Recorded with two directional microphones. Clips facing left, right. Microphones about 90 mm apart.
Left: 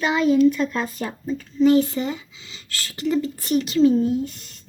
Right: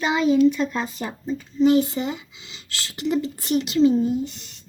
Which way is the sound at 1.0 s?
20° right (ahead or behind).